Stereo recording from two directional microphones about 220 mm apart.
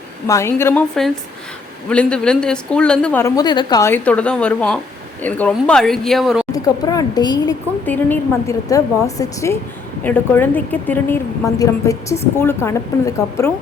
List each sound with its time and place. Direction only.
0.3 s a woman's voice: 10° left (ahead or behind)
6.5 s a woman's voice: 15° left (ahead or behind)